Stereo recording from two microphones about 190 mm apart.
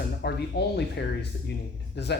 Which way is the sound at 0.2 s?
60° left (ahead or behind).